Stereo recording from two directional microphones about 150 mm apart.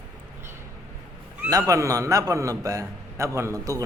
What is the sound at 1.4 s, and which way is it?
A man's voice, 25° right (ahead or behind).